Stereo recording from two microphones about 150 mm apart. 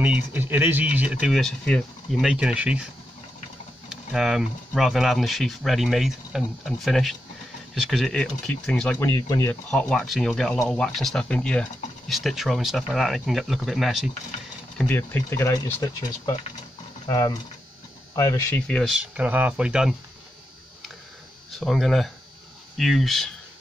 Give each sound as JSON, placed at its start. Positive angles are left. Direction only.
{"t": 0.0, "sound": "speech", "side_deg": -10}
{"t": 1.3, "sound": "speech", "side_deg": 0}
{"t": 3.9, "sound": "speech", "side_deg": 0}
{"t": 9.0, "sound": "speech", "side_deg": 15}
{"t": 9.7, "sound": "speech", "side_deg": 5}
{"t": 14.8, "sound": "speech", "side_deg": 15}
{"t": 18.1, "sound": "speech", "side_deg": 25}
{"t": 18.5, "sound": "speech", "side_deg": 5}
{"t": 21.5, "sound": "speech", "side_deg": 0}